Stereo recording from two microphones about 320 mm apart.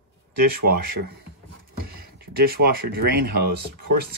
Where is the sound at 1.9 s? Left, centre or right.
Right.